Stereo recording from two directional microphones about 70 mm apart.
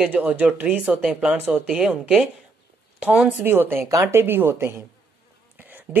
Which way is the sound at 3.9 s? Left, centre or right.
Right.